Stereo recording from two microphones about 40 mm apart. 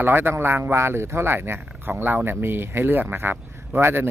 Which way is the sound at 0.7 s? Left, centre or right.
Right.